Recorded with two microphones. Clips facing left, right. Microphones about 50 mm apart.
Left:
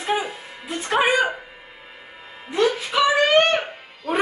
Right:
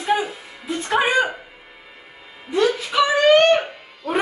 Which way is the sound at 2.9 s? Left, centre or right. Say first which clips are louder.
Right 1 dB; centre.